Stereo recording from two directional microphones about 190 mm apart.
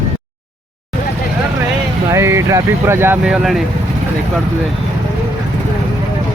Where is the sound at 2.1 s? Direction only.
15° right (ahead or behind).